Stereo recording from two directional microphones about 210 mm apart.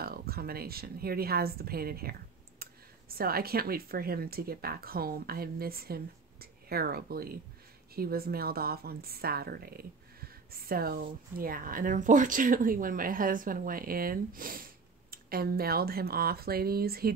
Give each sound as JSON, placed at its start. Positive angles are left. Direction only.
{"t": 0.0, "sound": "speech", "side_deg": -45}
{"t": 3.2, "sound": "speech", "side_deg": -45}